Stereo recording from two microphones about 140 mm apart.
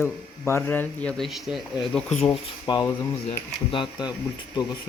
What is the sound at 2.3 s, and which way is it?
Speech, 25° left (ahead or behind).